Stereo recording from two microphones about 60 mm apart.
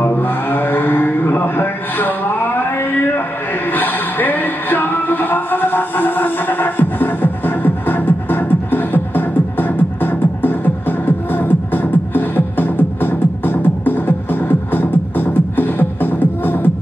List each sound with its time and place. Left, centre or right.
0.0 s mantra: left
3.7 s music: left